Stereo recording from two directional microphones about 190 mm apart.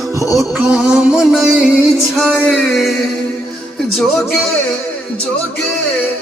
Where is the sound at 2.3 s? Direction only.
5° left (ahead or behind).